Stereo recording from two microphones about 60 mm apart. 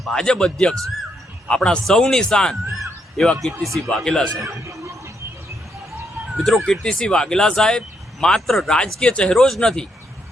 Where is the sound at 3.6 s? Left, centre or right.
Right.